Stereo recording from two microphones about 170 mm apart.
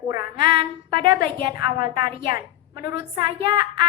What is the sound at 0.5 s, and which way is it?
A woman's voice, 30° right (ahead or behind).